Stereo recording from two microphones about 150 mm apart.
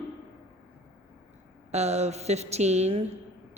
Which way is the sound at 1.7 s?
45° right (ahead or behind).